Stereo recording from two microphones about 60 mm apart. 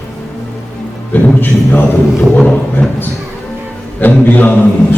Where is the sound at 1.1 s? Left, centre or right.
Left.